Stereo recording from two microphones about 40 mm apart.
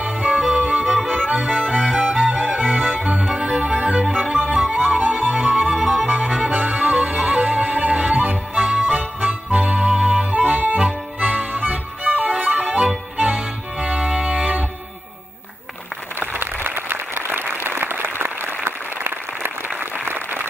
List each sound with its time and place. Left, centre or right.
0.0 s music: right
6.8 s music: right
10.3 s accordion: right
11.1 s music: right
16.2 s applause: right